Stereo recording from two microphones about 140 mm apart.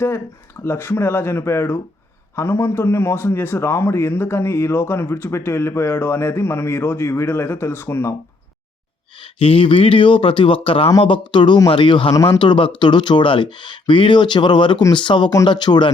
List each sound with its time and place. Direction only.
0.6 s a man's voice: 15° left (ahead or behind)
9.4 s speech: 40° left (ahead or behind)